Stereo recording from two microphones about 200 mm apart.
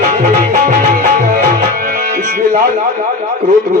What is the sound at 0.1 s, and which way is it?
Music, 40° right (ahead or behind).